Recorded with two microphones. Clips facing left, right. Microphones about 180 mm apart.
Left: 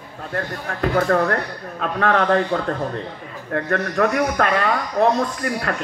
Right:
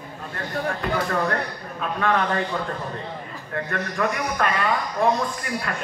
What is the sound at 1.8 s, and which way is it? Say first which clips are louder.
A man's voice: left 3 dB; 70° left (ahead or behind).